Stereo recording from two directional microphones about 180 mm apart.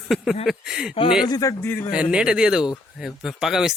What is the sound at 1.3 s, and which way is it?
Speech, 20° left (ahead or behind).